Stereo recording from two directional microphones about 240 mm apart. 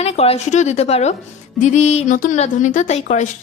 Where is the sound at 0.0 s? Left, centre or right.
Left.